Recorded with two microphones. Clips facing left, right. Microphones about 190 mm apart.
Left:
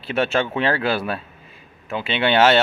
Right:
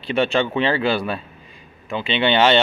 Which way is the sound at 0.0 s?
5° left (ahead or behind).